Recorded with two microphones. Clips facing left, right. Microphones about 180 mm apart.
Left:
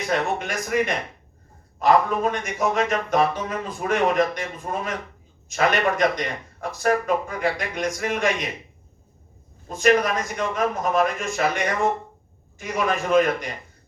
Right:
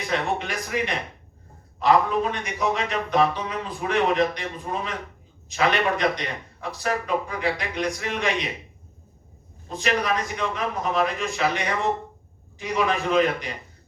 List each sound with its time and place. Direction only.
0.1 s a man's voice: 45° left (ahead or behind)
9.6 s a man's voice: 45° left (ahead or behind)